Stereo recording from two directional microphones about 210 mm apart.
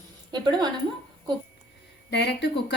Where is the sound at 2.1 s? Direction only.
55° left (ahead or behind).